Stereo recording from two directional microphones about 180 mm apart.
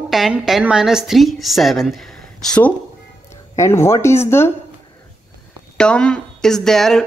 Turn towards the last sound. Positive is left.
turn(degrees=5)  # may be behind; listen again after turning